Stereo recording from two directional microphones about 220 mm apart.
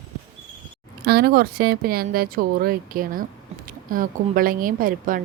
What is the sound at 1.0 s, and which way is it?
Speech, 45° right (ahead or behind).